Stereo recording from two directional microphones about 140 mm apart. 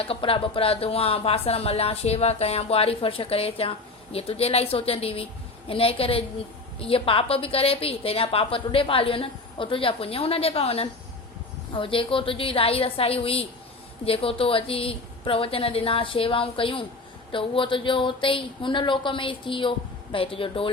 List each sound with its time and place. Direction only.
0.0 s a woman's voice: 40° left (ahead or behind)